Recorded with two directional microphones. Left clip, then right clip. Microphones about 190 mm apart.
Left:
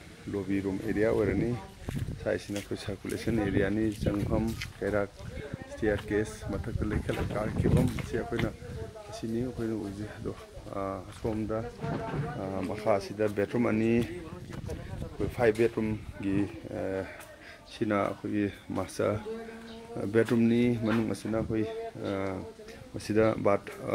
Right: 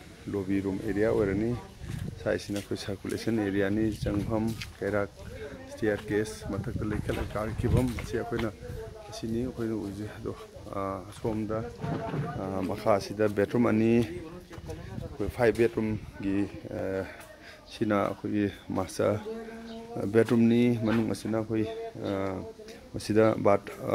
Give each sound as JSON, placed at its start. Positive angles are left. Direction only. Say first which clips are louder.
{"t": 0.3, "sound": "speech", "louder": "right 1 dB", "side_deg": -5}
{"t": 10.2, "sound": "speech", "louder": "right 1 dB", "side_deg": 0}
{"t": 12.4, "sound": "speech", "louder": "right 2 dB", "side_deg": -10}
{"t": 15.1, "sound": "speech", "louder": "right 1 dB", "side_deg": -5}